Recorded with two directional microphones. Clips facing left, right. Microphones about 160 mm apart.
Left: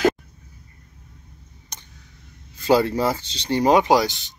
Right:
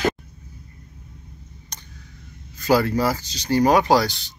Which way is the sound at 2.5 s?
25° left (ahead or behind).